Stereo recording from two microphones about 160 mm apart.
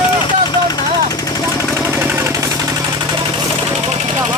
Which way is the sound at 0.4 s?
25° left (ahead or behind).